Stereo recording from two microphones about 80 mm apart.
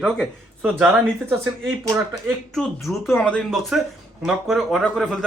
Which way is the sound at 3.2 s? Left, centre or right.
Centre.